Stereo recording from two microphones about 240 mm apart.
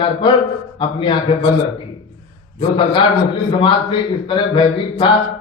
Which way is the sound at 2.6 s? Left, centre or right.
Centre.